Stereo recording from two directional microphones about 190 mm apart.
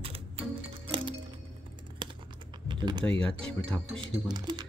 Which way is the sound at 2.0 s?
25° right (ahead or behind).